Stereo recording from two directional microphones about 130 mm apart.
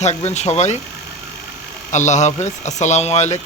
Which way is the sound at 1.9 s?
65° left (ahead or behind).